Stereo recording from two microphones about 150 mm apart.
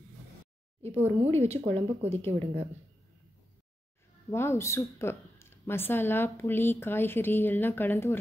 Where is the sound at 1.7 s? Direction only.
40° right (ahead or behind).